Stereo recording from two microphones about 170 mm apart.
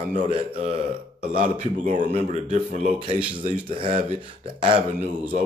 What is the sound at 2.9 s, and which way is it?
Speech, 30° right (ahead or behind).